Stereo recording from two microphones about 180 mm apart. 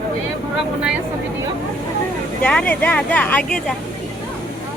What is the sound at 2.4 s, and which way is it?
A woman's voice, 10° left (ahead or behind).